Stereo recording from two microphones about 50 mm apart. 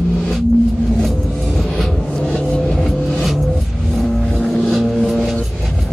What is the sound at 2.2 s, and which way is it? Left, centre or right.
Vehicle, left.